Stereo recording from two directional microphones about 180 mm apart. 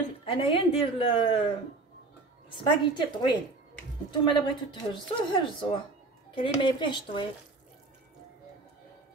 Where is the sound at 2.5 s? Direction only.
25° left (ahead or behind).